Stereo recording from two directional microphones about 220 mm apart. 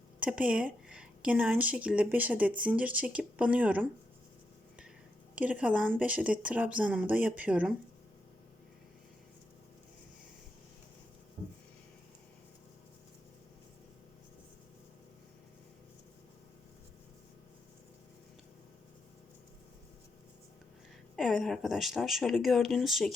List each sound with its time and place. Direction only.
0.2 s a woman's voice: 5° right (ahead or behind)
5.3 s a woman's voice: 5° right (ahead or behind)
11.4 s a sound: 25° right (ahead or behind)
21.2 s speech: centre (ahead or behind)